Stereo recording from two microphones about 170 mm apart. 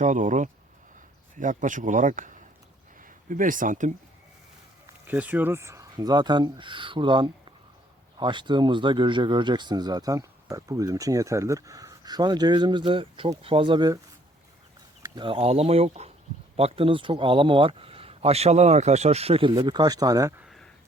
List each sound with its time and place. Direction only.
0.0 s speech: 45° right (ahead or behind)
5.0 s speech: 10° right (ahead or behind)
15.0 s speech: 25° right (ahead or behind)
20.4 s a sound: centre (ahead or behind)